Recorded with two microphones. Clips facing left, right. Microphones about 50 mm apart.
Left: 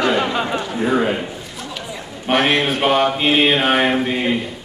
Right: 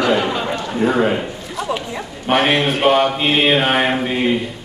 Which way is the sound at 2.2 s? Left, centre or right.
Centre.